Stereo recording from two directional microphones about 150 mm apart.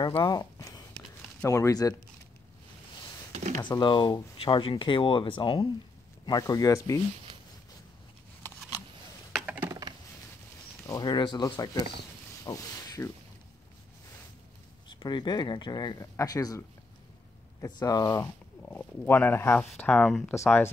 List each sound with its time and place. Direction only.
0.0 s speech: 30° left (ahead or behind)
3.3 s a sound: 55° right (ahead or behind)
3.8 s speech: 30° left (ahead or behind)
9.5 s typing: 15° right (ahead or behind)
10.9 s speech: 30° left (ahead or behind)
14.9 s speech: 30° left (ahead or behind); by 20.7 s 10° left (ahead or behind)